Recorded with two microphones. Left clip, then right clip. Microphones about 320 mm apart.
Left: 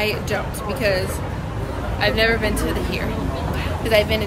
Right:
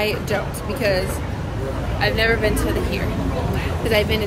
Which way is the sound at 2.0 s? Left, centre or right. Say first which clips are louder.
Left 1 dB; centre.